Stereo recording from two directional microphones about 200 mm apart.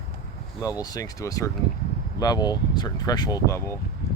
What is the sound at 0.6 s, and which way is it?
Speech, 15° left (ahead or behind).